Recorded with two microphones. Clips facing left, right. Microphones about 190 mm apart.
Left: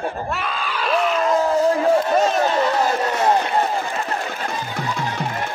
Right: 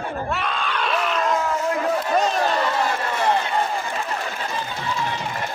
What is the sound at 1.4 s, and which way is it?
Crowd, 35° left (ahead or behind).